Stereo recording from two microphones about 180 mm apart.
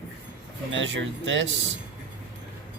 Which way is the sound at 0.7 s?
90° right.